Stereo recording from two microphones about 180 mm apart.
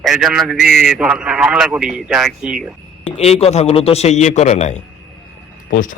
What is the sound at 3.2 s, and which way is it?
A man's voice, 35° left (ahead or behind).